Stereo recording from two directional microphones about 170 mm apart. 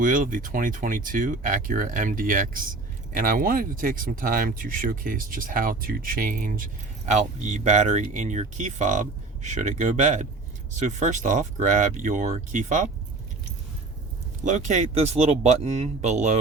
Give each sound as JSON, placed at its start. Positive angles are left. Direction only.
{"t": 0.0, "sound": "speech", "side_deg": -55}
{"t": 14.4, "sound": "speech", "side_deg": -45}